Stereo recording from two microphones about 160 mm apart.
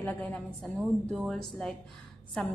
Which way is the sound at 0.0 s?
10° left (ahead or behind).